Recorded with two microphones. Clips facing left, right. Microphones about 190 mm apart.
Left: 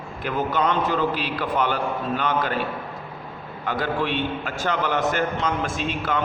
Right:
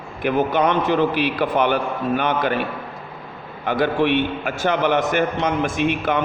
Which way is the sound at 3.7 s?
65° right (ahead or behind).